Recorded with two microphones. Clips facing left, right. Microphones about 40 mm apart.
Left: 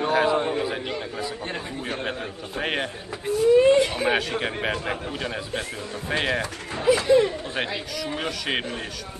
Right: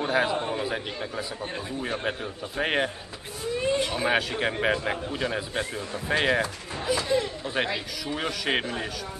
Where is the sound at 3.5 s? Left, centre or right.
Left.